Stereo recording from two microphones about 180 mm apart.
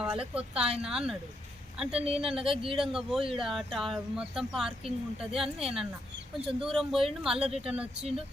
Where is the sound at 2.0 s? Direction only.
35° right (ahead or behind).